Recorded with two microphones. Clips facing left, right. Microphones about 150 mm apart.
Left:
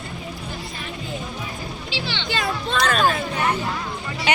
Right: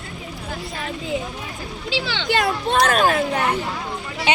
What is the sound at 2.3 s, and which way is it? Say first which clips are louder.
Speech: right 5 dB; 60° right (ahead or behind).